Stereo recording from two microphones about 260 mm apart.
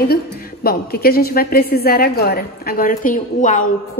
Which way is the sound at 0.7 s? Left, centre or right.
Left.